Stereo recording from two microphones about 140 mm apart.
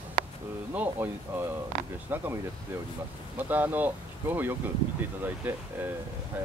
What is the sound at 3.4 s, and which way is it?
Speech, 10° right (ahead or behind).